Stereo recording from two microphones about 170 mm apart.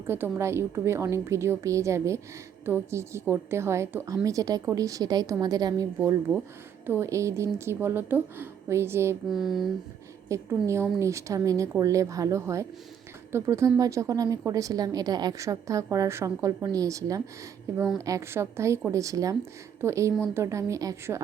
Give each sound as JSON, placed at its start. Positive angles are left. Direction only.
{"t": 0.1, "sound": "a woman's voice", "side_deg": -15}
{"t": 9.3, "sound": "speech", "side_deg": 0}
{"t": 10.2, "sound": "a woman's voice", "side_deg": -15}